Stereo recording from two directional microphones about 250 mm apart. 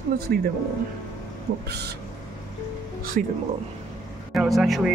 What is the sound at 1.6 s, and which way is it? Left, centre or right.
Speech, right.